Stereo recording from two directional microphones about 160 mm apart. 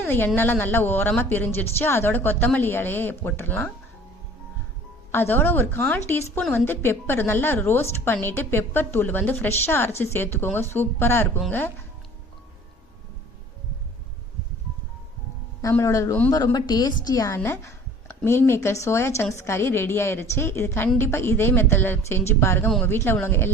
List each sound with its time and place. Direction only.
0.0 s a woman's voice: 10° left (ahead or behind)
5.1 s a woman's voice: 15° left (ahead or behind)
15.7 s a woman's voice: 20° left (ahead or behind)